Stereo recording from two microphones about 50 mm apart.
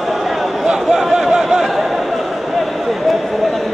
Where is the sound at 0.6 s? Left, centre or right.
Centre.